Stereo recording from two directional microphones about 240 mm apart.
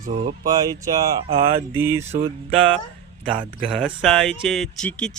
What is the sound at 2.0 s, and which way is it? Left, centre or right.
Music, right.